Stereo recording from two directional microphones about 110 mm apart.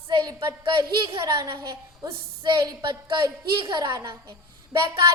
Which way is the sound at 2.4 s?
40° right (ahead or behind).